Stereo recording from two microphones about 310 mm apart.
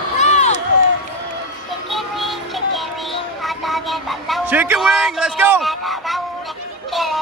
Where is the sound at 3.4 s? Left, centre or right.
Centre.